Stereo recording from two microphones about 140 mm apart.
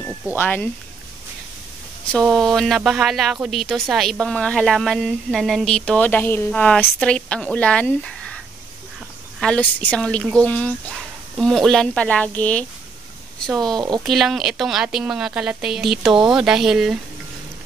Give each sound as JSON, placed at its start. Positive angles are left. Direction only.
{"t": 0.4, "sound": "speech", "side_deg": 15}
{"t": 2.1, "sound": "speech", "side_deg": 5}
{"t": 9.4, "sound": "speech", "side_deg": 10}
{"t": 13.7, "sound": "speech", "side_deg": -30}
{"t": 14.0, "sound": "speech", "side_deg": 0}